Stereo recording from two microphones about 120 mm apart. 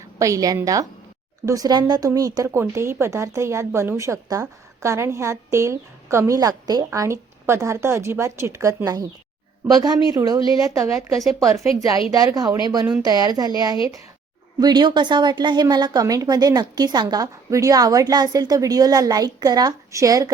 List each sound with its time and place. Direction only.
0.2 s a woman's voice: 30° right (ahead or behind)
11.2 s speech: centre (ahead or behind)
11.8 s a woman's voice: 30° right (ahead or behind)
14.6 s a woman's voice: 35° right (ahead or behind)